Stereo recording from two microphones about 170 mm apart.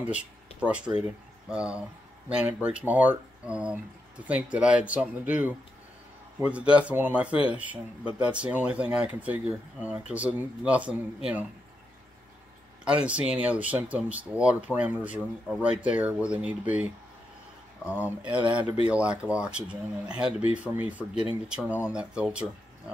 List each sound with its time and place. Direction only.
0.0 s speech: 5° right (ahead or behind)
12.8 s speech: 5° right (ahead or behind)
18.0 s speech: 5° right (ahead or behind)